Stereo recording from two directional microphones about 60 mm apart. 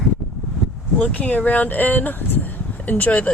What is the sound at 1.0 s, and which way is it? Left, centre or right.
Speech, left.